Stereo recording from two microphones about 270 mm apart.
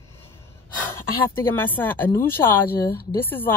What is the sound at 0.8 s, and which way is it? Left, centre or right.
Speech, centre.